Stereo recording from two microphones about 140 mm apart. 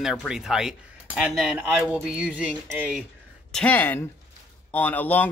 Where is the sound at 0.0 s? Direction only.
Centre (ahead or behind).